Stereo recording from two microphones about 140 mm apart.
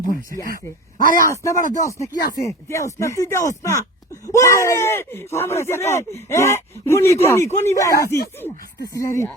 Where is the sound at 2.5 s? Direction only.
20° left (ahead or behind).